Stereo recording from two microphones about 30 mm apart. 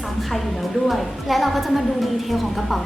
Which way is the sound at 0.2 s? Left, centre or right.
Centre.